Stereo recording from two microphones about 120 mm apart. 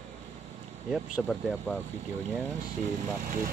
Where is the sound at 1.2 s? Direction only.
5° left (ahead or behind).